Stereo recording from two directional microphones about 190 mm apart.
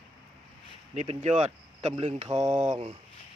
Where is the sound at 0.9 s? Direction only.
35° right (ahead or behind).